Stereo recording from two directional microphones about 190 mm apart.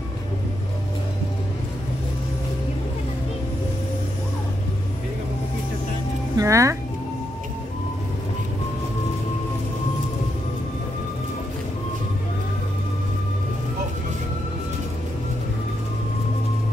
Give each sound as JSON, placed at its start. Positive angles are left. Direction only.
{"t": 6.3, "sound": "speech", "side_deg": -15}